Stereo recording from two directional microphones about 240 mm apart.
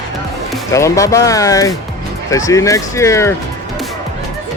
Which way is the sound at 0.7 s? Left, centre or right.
Centre.